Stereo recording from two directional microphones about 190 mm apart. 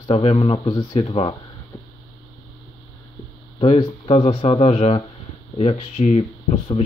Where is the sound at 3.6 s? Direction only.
30° left (ahead or behind).